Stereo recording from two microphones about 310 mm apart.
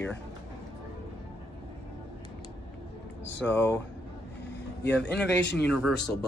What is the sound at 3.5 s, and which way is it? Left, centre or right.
Speech, centre.